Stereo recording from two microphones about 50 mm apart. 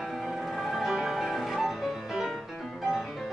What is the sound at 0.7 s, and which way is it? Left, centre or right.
Music, centre.